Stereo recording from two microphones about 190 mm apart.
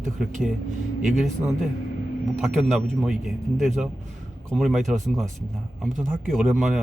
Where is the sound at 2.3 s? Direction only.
Centre (ahead or behind).